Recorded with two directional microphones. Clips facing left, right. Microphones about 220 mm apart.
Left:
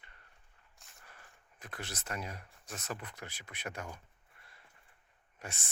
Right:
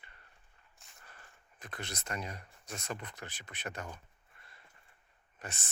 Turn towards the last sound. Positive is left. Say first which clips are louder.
# even
turn(degrees=10)  # may be behind; listen again after turning